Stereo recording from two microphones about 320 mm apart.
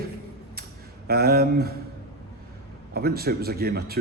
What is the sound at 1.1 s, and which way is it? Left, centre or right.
Speech, right.